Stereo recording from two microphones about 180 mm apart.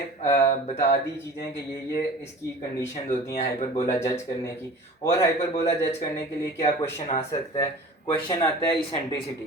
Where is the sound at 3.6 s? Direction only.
15° left (ahead or behind).